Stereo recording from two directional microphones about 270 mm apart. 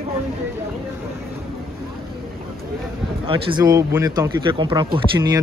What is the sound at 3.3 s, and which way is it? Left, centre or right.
Speech, centre.